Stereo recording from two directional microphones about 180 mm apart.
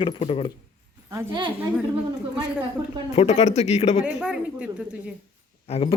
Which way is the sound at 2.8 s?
20° right (ahead or behind).